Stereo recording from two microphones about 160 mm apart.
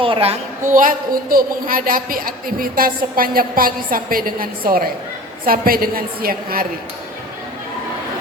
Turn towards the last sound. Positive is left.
turn(degrees=-65)  # may be behind; listen again after turning